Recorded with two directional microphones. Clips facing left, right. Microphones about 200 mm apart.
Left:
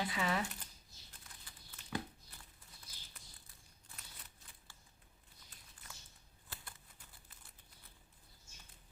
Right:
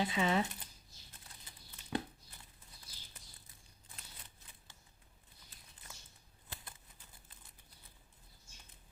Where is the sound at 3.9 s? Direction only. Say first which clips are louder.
Right 1 dB; 30° right (ahead or behind).